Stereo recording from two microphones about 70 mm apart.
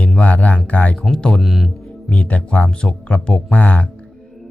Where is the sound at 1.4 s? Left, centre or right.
Centre.